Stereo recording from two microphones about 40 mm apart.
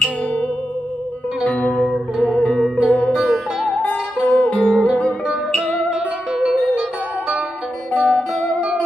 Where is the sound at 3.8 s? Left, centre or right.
Left.